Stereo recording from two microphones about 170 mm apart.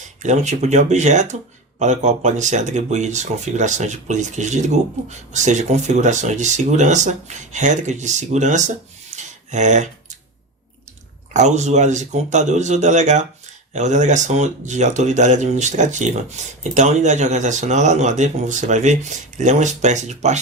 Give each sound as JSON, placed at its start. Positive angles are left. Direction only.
{"t": 0.2, "sound": "speech", "side_deg": -45}
{"t": 11.3, "sound": "speech", "side_deg": -45}